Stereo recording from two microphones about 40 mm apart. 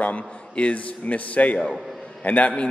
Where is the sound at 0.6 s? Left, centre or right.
Left.